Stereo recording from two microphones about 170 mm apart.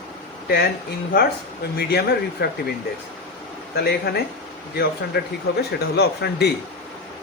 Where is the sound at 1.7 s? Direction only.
70° left (ahead or behind).